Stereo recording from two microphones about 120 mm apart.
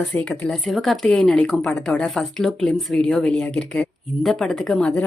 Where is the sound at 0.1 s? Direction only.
10° left (ahead or behind).